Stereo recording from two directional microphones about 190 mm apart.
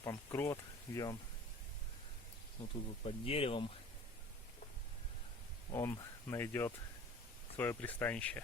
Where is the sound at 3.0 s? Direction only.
30° left (ahead or behind).